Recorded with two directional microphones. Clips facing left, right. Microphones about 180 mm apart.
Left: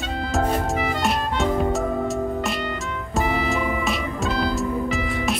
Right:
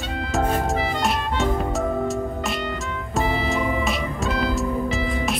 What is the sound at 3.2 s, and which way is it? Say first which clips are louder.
Music: left 1 dB; 30° right (ahead or behind).